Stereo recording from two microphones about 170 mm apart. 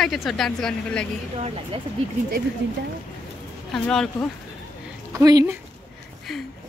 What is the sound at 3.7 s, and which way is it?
Speech, 5° left (ahead or behind).